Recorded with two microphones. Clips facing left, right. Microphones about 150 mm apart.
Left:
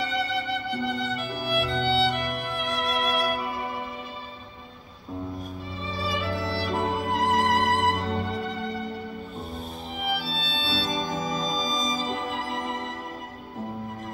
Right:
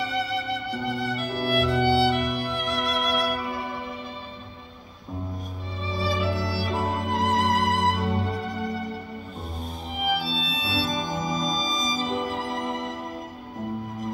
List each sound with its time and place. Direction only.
0.8 s music: centre (ahead or behind)
5.9 s music: centre (ahead or behind)
10.0 s music: centre (ahead or behind)